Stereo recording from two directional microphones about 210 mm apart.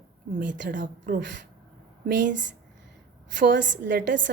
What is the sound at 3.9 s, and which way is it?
Speech, 40° right (ahead or behind).